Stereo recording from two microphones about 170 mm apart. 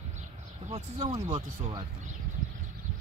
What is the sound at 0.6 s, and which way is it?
Speech, 30° right (ahead or behind).